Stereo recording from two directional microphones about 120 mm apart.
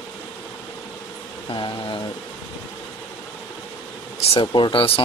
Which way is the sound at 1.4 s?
40° left (ahead or behind).